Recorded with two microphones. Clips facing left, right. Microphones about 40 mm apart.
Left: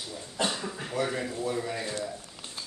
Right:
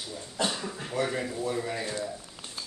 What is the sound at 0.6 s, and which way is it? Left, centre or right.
Speech, centre.